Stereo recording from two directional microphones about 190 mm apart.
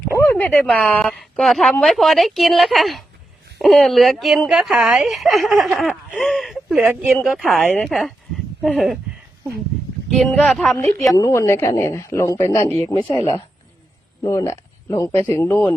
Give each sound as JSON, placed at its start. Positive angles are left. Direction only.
{"t": 0.0, "sound": "speech", "side_deg": 10}
{"t": 10.1, "sound": "speech", "side_deg": 0}
{"t": 11.2, "sound": "a woman's voice", "side_deg": 15}
{"t": 12.9, "sound": "speech", "side_deg": 30}
{"t": 14.3, "sound": "a woman's voice", "side_deg": 15}